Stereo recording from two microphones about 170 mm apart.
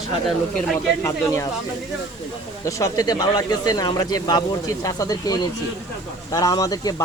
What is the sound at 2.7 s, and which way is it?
Speech, 20° left (ahead or behind).